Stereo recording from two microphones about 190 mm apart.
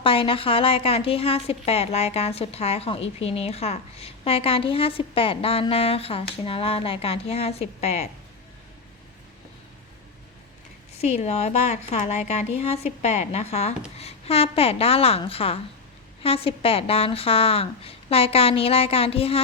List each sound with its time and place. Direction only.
0.0 s a woman's voice: 30° left (ahead or behind)
10.9 s a woman's voice: 35° left (ahead or behind)